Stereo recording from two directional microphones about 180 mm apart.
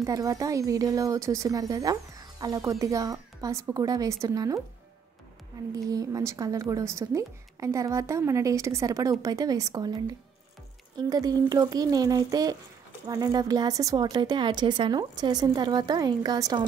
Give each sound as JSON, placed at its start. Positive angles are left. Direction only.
{"t": 0.0, "sound": "a woman's voice", "side_deg": -20}
{"t": 5.9, "sound": "a woman's voice", "side_deg": -20}
{"t": 11.1, "sound": "a woman's voice", "side_deg": -20}